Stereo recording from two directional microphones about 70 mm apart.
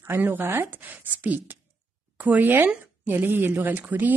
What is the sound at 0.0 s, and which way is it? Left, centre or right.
Speech, right.